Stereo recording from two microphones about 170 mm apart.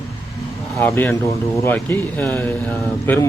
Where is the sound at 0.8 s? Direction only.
15° left (ahead or behind).